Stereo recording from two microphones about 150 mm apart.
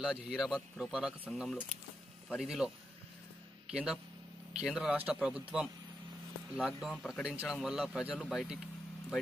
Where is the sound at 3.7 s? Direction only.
5° right (ahead or behind).